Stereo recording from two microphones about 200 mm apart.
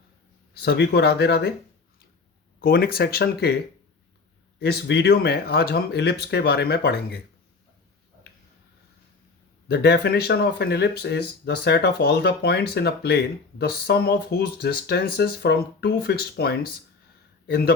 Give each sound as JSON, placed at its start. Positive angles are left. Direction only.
{"t": 0.5, "sound": "speech", "side_deg": 55}
{"t": 2.6, "sound": "speech", "side_deg": 50}
{"t": 4.6, "sound": "speech", "side_deg": 55}
{"t": 9.6, "sound": "speech", "side_deg": 55}